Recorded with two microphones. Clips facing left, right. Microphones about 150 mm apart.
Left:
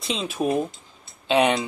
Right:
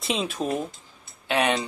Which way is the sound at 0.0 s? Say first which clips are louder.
Right 1 dB; centre (ahead or behind).